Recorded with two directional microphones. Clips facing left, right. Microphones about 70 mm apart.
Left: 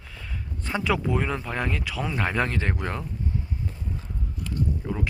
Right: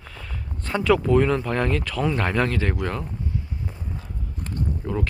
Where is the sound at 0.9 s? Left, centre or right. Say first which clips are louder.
Right 8 dB; centre.